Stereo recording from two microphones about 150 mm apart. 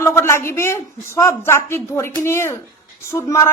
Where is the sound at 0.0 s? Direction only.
15° left (ahead or behind).